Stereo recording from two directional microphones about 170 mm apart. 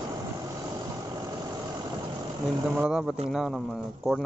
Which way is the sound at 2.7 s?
5° right (ahead or behind).